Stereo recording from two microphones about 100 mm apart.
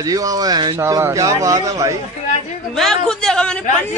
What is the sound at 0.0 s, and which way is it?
Speech, 35° right (ahead or behind).